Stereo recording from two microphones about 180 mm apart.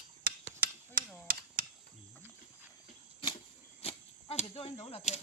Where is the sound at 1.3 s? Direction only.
55° right (ahead or behind).